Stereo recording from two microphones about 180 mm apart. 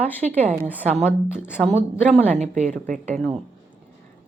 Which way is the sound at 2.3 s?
40° right (ahead or behind).